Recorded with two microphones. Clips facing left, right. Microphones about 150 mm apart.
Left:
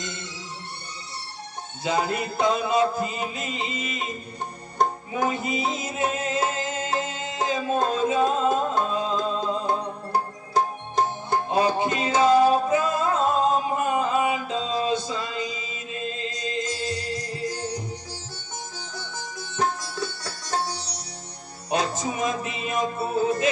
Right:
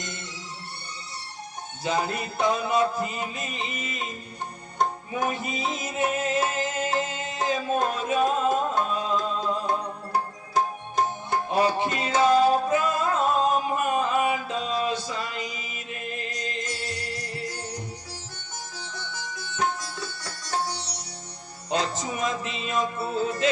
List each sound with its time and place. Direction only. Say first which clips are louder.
1.8 s music: left 2 dB; 20° left (ahead or behind)
5.1 s music: left 3 dB; 25° left (ahead or behind)
18.8 s sitar: left 1 dB; 40° left (ahead or behind)
21.7 s music: left 2 dB; 25° left (ahead or behind)